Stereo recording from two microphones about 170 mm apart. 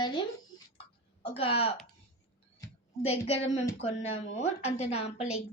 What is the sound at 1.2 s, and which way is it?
Speech, 35° left (ahead or behind).